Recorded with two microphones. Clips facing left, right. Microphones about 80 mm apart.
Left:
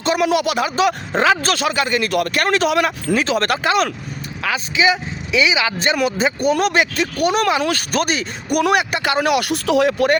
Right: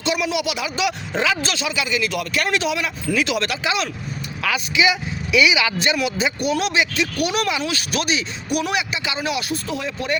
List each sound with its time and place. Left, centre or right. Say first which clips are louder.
0.0 s speech: left 5 dB; left
4.4 s speech: left 2 dB; left